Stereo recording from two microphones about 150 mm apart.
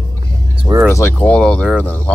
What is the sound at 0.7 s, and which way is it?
Speech, 25° right (ahead or behind).